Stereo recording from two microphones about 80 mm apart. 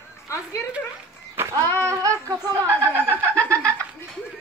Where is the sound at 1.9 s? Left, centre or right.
Right.